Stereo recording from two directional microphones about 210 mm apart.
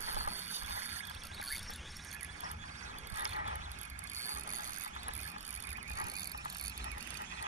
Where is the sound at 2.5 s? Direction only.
35° right (ahead or behind).